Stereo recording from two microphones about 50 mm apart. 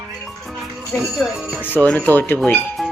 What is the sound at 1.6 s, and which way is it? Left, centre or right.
Speech, left.